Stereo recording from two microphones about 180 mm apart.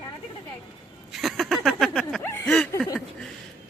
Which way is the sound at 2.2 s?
15° left (ahead or behind).